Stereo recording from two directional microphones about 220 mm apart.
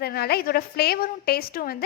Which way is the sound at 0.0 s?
45° left (ahead or behind).